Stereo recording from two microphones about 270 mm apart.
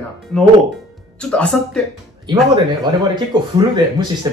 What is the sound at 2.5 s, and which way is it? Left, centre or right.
Speech, centre.